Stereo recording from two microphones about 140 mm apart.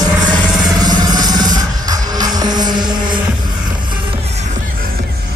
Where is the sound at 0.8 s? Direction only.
30° right (ahead or behind).